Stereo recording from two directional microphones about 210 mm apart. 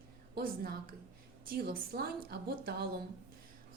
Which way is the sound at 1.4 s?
45° right (ahead or behind).